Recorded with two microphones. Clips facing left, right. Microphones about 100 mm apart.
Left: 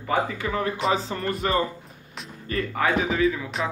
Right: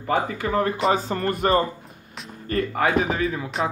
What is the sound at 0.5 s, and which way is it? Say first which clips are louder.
A man's voice: right 6 dB; 45° right (ahead or behind).